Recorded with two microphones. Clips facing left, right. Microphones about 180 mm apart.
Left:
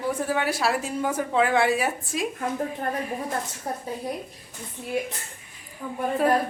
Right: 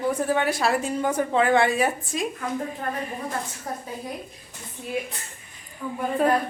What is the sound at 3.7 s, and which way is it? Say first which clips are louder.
Speech: left 3 dB; 30° left (ahead or behind).